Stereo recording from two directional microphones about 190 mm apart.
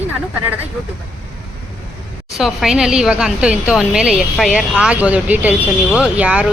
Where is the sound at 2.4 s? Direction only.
Centre (ahead or behind).